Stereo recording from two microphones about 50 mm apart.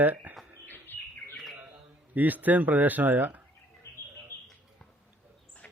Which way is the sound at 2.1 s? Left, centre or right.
Right.